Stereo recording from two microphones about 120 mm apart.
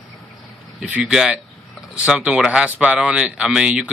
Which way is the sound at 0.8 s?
10° right (ahead or behind).